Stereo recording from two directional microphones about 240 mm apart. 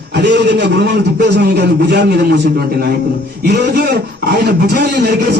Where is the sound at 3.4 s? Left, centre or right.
Right.